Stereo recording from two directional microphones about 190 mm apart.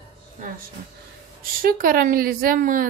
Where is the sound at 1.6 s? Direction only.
50° right (ahead or behind).